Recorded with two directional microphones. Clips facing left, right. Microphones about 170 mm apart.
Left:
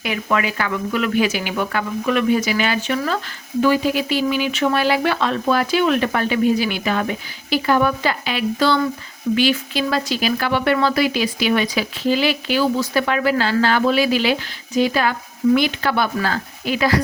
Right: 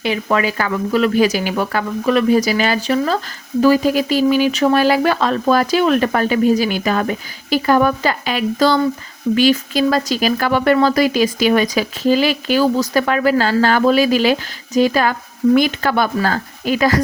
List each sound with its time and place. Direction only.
0.0 s speech: 30° right (ahead or behind)